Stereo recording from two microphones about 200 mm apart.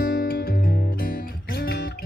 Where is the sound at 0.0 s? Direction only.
50° left (ahead or behind).